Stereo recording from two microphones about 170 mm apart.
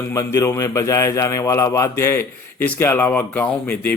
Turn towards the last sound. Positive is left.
turn(degrees=10)  # may be behind; listen again after turning